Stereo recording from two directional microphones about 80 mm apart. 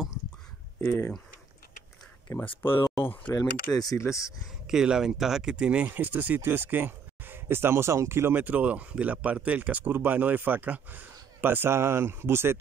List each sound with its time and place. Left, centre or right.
0.7 s speech: left
2.4 s speech: left
3.0 s speech: left
3.7 s speech: left
4.0 s speech: left
4.6 s speech: centre; by 12.5 s right